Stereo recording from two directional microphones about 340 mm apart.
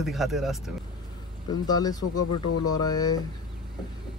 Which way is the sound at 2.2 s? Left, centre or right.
Left.